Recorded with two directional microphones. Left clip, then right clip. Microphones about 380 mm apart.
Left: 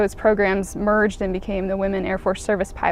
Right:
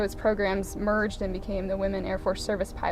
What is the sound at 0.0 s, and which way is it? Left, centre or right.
Speech, left.